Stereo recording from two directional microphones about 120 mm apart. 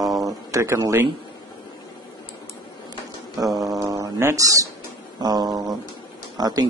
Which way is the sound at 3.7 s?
30° right (ahead or behind).